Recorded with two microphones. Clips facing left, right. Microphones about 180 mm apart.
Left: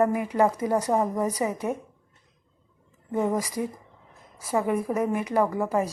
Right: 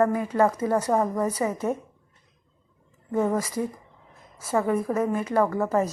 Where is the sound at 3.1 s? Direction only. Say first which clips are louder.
Right 1 dB; 15° left (ahead or behind).